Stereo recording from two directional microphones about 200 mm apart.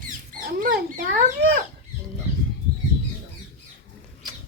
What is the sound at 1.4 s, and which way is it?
Speech, 55° right (ahead or behind).